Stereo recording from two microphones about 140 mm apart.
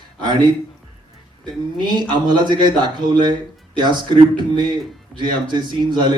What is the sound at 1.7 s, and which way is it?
A man's voice, 30° right (ahead or behind).